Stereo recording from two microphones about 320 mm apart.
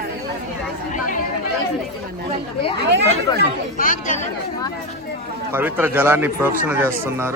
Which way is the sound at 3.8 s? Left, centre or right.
Left.